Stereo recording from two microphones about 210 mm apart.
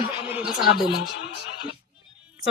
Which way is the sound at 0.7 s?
50° left (ahead or behind).